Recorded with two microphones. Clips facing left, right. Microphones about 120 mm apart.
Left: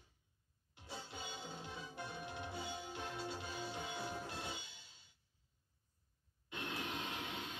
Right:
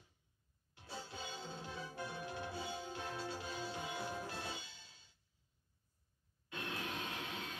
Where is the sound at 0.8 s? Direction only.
20° left (ahead or behind).